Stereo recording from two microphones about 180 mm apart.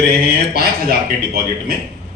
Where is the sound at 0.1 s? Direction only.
60° right (ahead or behind).